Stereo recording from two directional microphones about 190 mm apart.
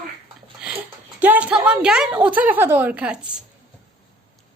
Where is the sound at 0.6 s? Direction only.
10° right (ahead or behind).